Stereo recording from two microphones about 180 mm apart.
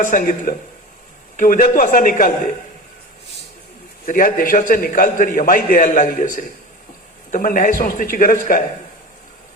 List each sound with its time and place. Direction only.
0.0 s a man's voice: 45° left (ahead or behind)
4.0 s a man's voice: 50° left (ahead or behind)